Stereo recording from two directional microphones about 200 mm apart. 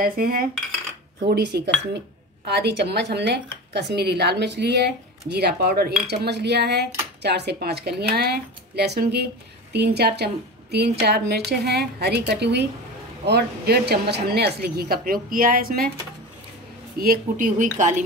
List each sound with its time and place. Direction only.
0.0 s a woman's voice: 45° right (ahead or behind)
17.0 s speech: 45° right (ahead or behind)